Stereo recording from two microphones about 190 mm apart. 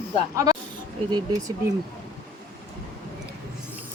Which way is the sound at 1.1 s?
20° right (ahead or behind).